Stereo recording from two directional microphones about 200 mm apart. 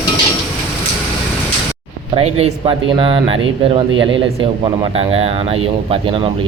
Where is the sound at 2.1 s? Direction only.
30° right (ahead or behind).